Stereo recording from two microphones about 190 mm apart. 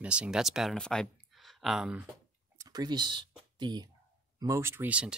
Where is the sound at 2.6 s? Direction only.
20° right (ahead or behind).